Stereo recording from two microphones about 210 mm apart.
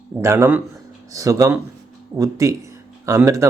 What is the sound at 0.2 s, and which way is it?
Speech, 10° right (ahead or behind).